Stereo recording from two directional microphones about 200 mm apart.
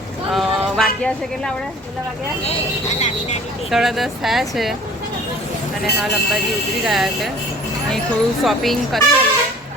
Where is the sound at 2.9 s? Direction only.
35° left (ahead or behind).